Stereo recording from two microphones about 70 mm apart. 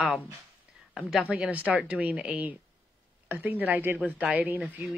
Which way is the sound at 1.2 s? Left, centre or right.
Centre.